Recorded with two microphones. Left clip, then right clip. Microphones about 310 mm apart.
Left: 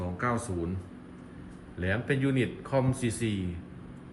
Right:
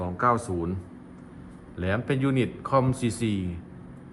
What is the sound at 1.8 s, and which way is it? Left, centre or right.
Speech, right.